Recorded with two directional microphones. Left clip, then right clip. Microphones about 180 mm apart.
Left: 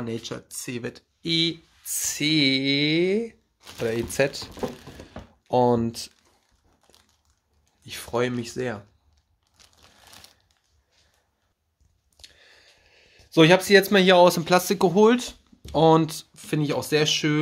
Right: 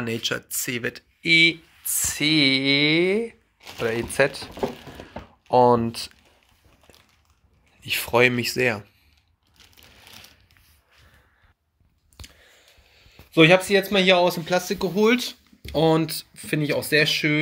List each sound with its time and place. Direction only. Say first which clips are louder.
0.0 s speech: right 6 dB; centre (ahead or behind); by 4.5 s 40° left (ahead or behind)
5.5 s speech: right 4 dB; 30° left (ahead or behind)
6.9 s crushing: right 4 dB; centre (ahead or behind)
7.8 s speech: right 8 dB; 5° right (ahead or behind)
12.9 s a sound: even; 30° left (ahead or behind)
13.7 s speech: left 2 dB; 45° left (ahead or behind)
15.0 s speech: even; 25° left (ahead or behind)